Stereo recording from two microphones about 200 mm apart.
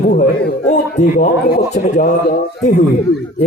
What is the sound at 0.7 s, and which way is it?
Speech, 40° left (ahead or behind).